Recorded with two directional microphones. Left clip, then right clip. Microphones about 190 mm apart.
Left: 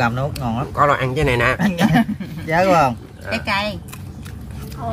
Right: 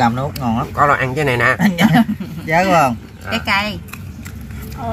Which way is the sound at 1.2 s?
25° left (ahead or behind).